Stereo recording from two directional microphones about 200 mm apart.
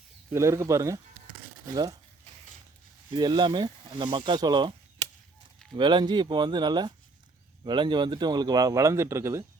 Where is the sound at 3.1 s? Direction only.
20° right (ahead or behind).